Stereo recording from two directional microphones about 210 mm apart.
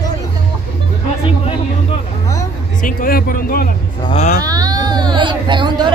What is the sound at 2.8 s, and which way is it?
Speech, 40° left (ahead or behind).